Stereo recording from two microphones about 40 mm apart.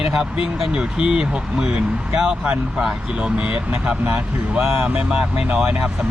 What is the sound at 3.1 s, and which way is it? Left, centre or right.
Speech, right.